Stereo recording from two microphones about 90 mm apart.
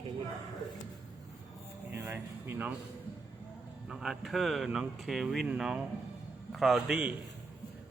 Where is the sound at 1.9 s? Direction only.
30° right (ahead or behind).